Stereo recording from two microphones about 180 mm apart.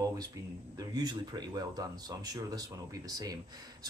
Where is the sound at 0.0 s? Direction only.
20° right (ahead or behind).